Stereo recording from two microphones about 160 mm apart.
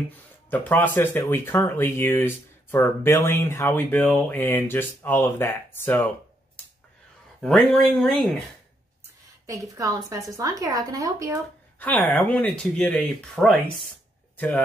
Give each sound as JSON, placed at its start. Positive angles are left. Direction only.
{"t": 0.1, "sound": "speech", "side_deg": 10}
{"t": 7.4, "sound": "speech", "side_deg": 0}
{"t": 9.5, "sound": "a woman's voice", "side_deg": -20}
{"t": 11.8, "sound": "speech", "side_deg": 10}